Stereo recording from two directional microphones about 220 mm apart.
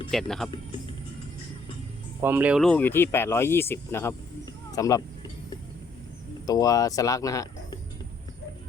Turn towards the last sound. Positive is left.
turn(degrees=15)  # may be behind; listen again after turning